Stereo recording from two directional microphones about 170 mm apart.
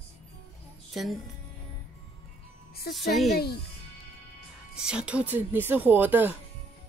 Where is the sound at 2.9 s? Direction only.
Centre (ahead or behind).